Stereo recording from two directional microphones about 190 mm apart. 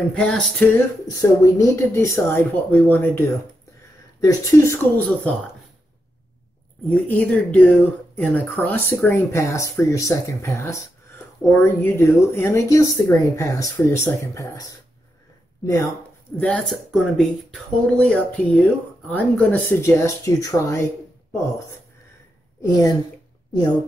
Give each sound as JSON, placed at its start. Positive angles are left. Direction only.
{"t": 0.1, "sound": "speech", "side_deg": 5}
{"t": 0.7, "sound": "speech", "side_deg": 15}
{"t": 6.9, "sound": "speech", "side_deg": 5}
{"t": 16.3, "sound": "speech", "side_deg": 5}